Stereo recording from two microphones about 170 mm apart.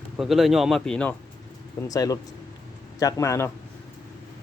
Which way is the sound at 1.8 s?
20° left (ahead or behind).